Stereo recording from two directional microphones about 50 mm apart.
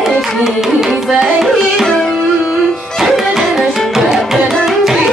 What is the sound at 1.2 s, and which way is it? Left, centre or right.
Music, centre.